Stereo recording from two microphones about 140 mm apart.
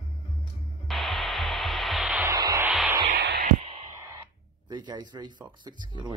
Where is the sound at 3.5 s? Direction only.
50° right (ahead or behind).